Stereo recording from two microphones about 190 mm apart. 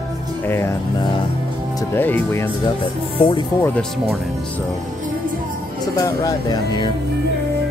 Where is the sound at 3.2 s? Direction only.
25° left (ahead or behind).